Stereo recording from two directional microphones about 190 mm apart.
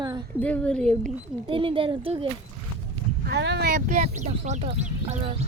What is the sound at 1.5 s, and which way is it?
Speech, 25° right (ahead or behind).